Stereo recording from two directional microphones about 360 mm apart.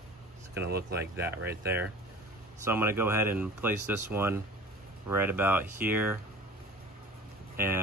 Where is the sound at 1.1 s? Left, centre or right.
Centre.